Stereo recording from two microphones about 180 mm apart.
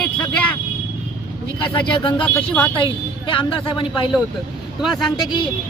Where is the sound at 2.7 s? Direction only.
30° left (ahead or behind).